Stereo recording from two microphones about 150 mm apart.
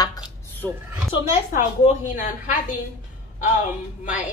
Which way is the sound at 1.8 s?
55° left (ahead or behind).